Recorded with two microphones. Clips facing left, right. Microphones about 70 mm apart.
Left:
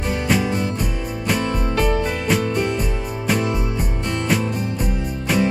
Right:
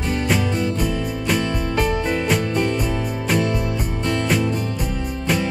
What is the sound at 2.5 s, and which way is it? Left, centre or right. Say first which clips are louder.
Music: right 1 dB; centre.